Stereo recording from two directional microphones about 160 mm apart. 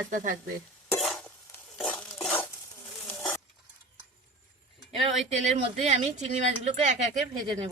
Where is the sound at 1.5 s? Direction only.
5° left (ahead or behind).